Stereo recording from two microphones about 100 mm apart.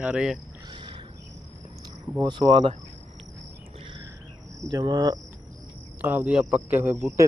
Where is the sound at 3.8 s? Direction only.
60° right (ahead or behind).